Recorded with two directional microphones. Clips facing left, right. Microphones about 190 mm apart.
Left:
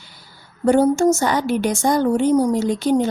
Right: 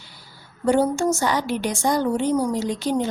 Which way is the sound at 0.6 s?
45° left (ahead or behind).